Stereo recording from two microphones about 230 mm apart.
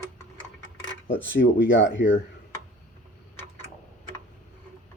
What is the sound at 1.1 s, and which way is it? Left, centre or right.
Speech, left.